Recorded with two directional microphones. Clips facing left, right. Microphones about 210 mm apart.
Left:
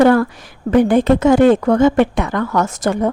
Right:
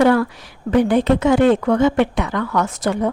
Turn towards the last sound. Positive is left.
turn(degrees=45)  # may be behind; listen again after turning